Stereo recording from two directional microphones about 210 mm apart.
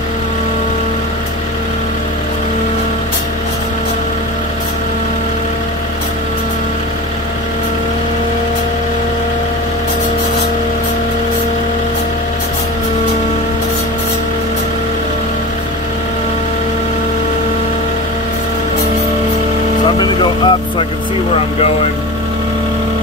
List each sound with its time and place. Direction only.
20.0 s vehicle: 20° left (ahead or behind)